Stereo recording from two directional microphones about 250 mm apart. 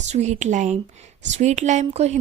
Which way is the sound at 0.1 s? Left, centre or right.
Right.